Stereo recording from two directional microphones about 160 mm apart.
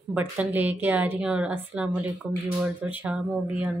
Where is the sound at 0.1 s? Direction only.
10° right (ahead or behind).